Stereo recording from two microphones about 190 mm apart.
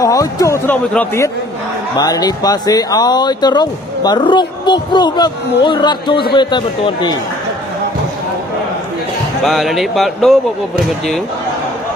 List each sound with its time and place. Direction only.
0.0 s a man's voice: 20° left (ahead or behind)
9.4 s speech: centre (ahead or behind)